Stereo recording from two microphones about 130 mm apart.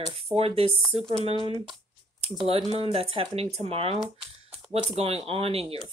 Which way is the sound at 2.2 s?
50° right (ahead or behind).